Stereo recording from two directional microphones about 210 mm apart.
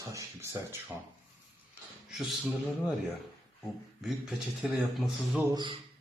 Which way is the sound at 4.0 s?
Centre (ahead or behind).